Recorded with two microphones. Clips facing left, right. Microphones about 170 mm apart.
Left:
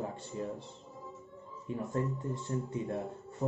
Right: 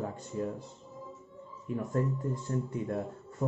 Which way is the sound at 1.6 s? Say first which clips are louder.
Right 3 dB; 25° left (ahead or behind).